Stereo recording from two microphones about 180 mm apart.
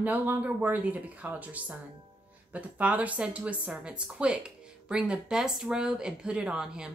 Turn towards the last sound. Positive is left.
turn(degrees=-5)  # may be behind; listen again after turning